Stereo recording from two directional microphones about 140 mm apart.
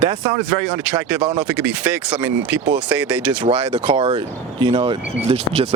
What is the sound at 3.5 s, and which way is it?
Speech, 35° right (ahead or behind).